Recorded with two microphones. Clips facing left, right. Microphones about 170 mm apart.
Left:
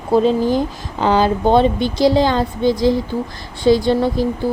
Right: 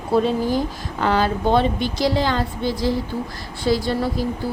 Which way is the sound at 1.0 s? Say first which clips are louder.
Left 5 dB; 30° left (ahead or behind).